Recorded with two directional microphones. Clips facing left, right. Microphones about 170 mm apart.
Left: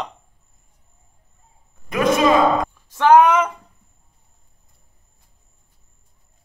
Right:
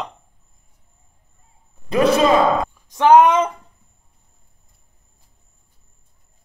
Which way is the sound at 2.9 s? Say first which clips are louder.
Right 1 dB; 20° right (ahead or behind).